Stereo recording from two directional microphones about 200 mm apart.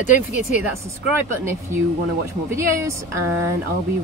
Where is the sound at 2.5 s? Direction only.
15° right (ahead or behind).